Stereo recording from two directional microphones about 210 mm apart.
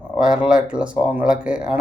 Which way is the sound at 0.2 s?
5° right (ahead or behind).